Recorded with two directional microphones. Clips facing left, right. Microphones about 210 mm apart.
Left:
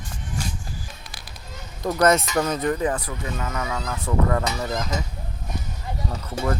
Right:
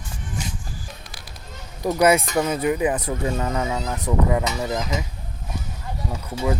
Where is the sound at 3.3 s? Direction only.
30° right (ahead or behind); by 5.1 s 10° right (ahead or behind).